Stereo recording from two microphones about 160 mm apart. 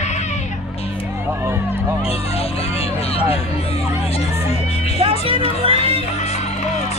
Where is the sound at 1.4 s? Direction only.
15° right (ahead or behind).